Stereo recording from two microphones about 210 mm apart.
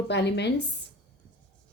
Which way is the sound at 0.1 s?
55° left (ahead or behind).